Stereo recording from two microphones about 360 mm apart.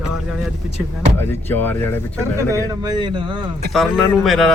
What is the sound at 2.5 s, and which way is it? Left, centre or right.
Speech, centre.